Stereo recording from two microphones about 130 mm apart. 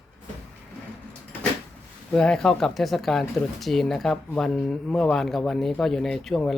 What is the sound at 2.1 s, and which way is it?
Speech, 5° left (ahead or behind).